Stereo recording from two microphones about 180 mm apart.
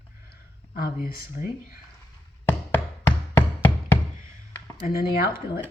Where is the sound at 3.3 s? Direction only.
10° left (ahead or behind).